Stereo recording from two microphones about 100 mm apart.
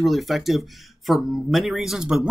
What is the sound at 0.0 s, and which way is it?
Speech, centre (ahead or behind).